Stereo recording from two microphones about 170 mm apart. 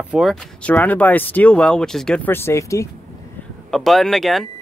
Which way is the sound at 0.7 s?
10° left (ahead or behind).